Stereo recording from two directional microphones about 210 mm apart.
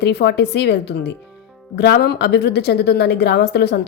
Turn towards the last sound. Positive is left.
turn(degrees=50)  # may be behind; listen again after turning